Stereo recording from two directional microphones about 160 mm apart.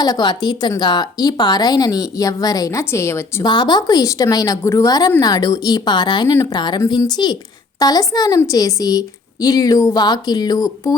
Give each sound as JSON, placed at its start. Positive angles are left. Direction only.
{"t": 0.0, "sound": "a woman's voice", "side_deg": 25}
{"t": 3.4, "sound": "a woman's voice", "side_deg": 30}